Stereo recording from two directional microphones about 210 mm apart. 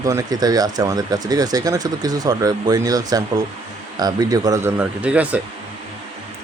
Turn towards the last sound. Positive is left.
turn(degrees=-5)  # may be behind; listen again after turning